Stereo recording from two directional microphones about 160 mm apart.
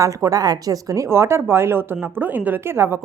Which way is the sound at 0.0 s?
20° right (ahead or behind).